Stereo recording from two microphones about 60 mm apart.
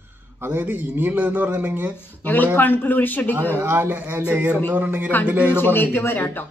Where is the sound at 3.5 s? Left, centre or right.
Right.